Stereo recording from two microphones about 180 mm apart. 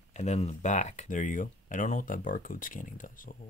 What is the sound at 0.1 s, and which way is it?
Speech, 40° left (ahead or behind).